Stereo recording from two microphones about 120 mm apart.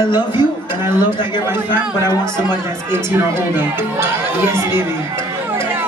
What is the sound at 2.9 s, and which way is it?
Speech, 20° right (ahead or behind).